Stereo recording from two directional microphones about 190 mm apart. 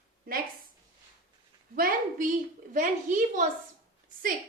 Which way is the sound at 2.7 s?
40° right (ahead or behind).